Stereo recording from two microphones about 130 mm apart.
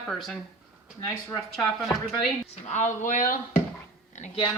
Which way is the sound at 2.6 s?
65° left (ahead or behind).